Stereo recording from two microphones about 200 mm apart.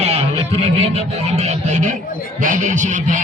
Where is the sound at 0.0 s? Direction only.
30° right (ahead or behind).